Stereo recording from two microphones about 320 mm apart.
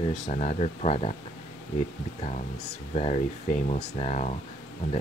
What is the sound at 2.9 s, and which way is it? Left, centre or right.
Speech, left.